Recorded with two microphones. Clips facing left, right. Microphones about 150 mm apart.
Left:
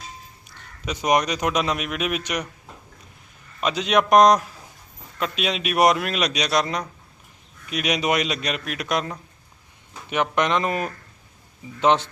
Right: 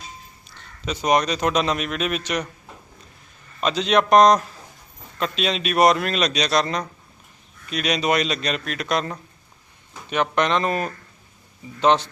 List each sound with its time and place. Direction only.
0.9 s a man's voice: 15° left (ahead or behind)
3.6 s a man's voice: 10° left (ahead or behind)